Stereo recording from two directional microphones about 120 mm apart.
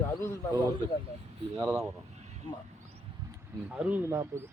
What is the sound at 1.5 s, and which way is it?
Speech, 25° right (ahead or behind).